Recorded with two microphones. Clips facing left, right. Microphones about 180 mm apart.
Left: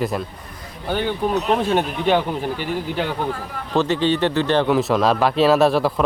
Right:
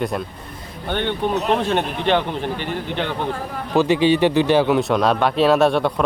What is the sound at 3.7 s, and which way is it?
Speech, 10° right (ahead or behind).